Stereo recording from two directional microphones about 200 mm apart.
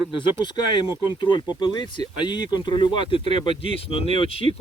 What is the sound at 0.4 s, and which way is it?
Speech, 20° left (ahead or behind).